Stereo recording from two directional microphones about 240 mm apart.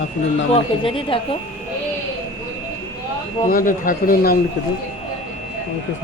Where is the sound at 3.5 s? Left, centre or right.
Left.